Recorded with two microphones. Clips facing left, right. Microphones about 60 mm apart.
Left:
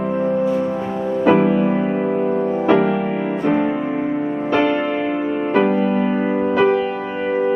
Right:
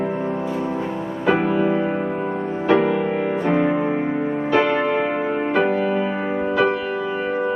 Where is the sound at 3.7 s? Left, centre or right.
Centre.